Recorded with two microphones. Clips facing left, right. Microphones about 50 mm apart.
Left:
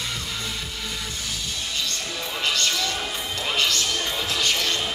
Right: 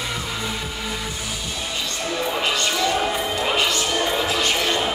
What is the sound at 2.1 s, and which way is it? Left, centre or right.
Music, centre.